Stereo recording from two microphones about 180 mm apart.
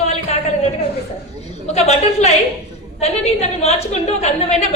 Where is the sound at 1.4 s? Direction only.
35° left (ahead or behind).